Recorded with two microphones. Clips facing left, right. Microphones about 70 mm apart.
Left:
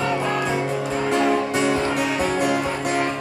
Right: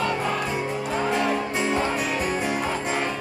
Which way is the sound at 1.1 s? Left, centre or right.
Left.